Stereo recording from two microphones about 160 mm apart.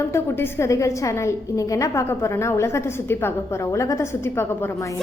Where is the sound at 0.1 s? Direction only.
15° left (ahead or behind).